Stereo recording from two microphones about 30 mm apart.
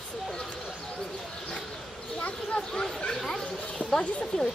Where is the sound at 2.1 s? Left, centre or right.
Left.